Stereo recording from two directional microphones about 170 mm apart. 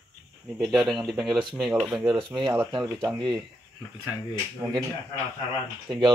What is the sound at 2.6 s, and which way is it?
Speech, 25° right (ahead or behind).